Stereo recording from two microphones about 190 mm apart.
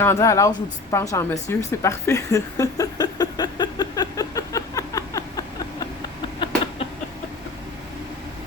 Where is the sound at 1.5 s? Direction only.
15° left (ahead or behind).